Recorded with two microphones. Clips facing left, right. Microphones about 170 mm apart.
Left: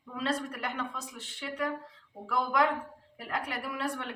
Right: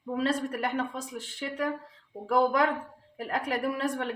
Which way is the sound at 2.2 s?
35° right (ahead or behind).